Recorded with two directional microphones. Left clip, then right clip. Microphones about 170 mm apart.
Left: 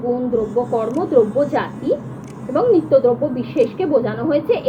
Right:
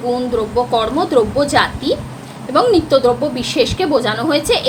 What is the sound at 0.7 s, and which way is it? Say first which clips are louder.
Speech: right 3 dB; 40° right (ahead or behind).